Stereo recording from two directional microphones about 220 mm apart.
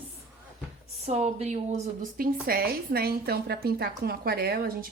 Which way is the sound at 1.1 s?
30° right (ahead or behind).